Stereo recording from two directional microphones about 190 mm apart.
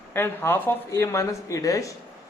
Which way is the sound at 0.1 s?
10° left (ahead or behind).